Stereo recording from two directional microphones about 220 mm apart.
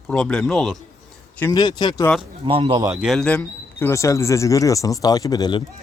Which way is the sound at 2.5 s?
25° right (ahead or behind).